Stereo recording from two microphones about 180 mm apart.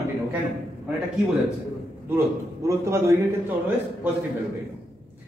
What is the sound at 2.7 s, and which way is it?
Speech, 15° right (ahead or behind).